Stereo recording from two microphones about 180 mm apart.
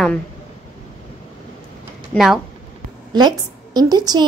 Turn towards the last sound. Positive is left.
turn(degrees=-20)  # may be behind; listen again after turning